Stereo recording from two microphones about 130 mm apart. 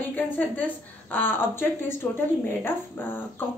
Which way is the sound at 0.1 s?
15° left (ahead or behind).